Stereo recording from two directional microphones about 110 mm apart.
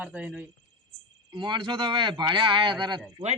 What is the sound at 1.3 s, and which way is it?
Speech, 45° right (ahead or behind).